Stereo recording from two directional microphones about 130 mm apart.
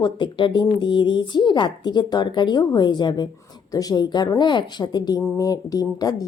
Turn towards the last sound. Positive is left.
turn(degrees=30)  # may be behind; listen again after turning